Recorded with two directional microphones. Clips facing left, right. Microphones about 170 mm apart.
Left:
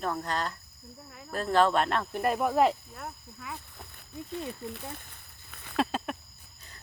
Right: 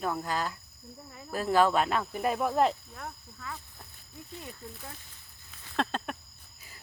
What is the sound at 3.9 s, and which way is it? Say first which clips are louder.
Speech: left 8 dB; 65° left (ahead or behind).